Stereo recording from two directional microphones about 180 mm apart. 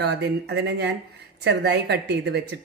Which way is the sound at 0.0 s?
65° right (ahead or behind).